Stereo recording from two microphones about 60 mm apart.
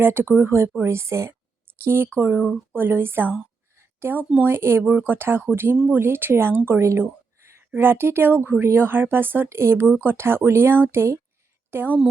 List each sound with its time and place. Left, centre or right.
0.0 s speech: right
3.8 s a sound: right
4.4 s speech: right
4.8 s speech: right
9.5 s speech: right
9.9 s a woman's voice: right